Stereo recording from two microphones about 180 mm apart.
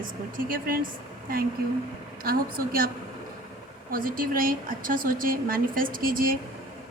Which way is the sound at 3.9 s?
50° right (ahead or behind).